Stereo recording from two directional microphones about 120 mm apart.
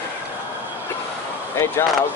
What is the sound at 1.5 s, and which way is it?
Speech, 20° left (ahead or behind).